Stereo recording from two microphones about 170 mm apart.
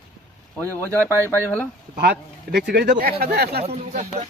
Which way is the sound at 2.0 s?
75° right (ahead or behind).